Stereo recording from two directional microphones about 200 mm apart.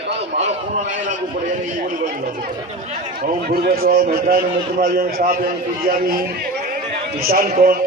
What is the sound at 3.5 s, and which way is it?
A man's voice, 50° right (ahead or behind).